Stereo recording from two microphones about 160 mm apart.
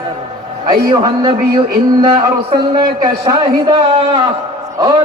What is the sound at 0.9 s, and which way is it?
A man's voice, 25° right (ahead or behind).